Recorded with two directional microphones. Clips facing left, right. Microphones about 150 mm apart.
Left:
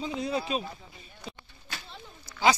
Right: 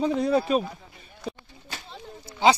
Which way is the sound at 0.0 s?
50° right (ahead or behind).